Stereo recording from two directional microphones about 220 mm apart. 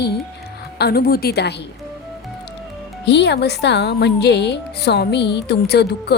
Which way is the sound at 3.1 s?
50° left (ahead or behind).